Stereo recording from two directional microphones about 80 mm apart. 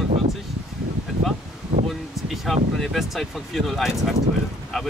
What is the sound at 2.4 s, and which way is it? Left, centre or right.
Speech, centre.